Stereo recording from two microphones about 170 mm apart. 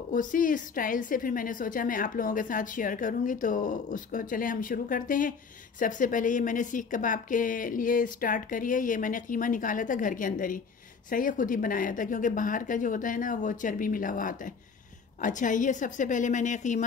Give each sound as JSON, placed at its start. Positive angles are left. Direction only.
{"t": 0.1, "sound": "a woman's voice", "side_deg": 50}